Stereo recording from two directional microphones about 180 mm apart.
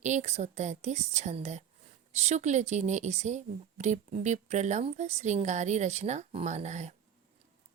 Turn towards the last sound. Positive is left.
turn(degrees=-40)  # may be behind; listen again after turning